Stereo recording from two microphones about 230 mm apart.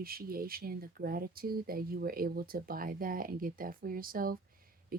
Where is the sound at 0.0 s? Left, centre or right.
Right.